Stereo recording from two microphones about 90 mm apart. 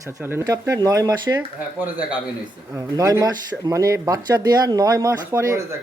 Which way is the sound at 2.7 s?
40° right (ahead or behind).